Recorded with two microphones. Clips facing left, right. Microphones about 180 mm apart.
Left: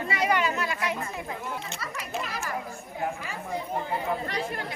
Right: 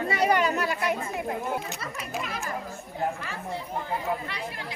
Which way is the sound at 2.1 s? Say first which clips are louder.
Even; centre (ahead or behind).